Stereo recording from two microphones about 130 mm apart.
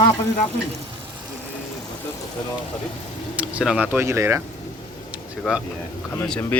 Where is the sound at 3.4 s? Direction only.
10° right (ahead or behind).